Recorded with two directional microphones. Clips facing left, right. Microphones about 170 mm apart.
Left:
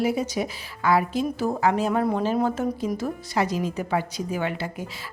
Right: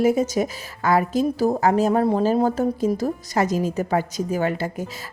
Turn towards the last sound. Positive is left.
turn(degrees=-40)  # may be behind; listen again after turning